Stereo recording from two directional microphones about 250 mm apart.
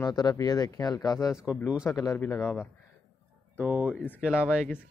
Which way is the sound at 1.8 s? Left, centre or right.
Centre.